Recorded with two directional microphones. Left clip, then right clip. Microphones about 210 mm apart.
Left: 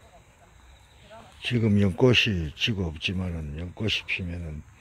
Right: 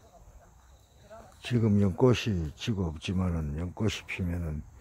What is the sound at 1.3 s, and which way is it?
Speech, centre (ahead or behind).